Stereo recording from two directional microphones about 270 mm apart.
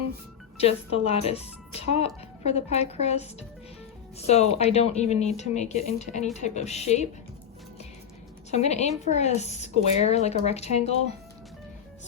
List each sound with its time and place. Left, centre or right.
0.5 s speech: left
8.4 s speech: left